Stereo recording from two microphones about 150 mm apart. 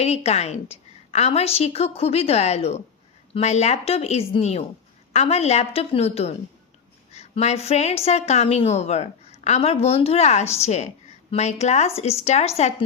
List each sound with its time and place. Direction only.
0.0 s a woman's voice: 45° left (ahead or behind)